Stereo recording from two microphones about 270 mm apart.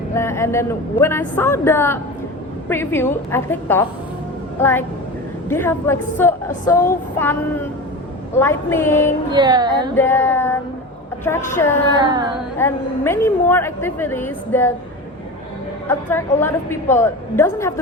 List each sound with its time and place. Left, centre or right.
0.1 s a woman's voice: centre
9.3 s a sound: centre
9.9 s a woman's voice: centre
15.9 s a woman's voice: centre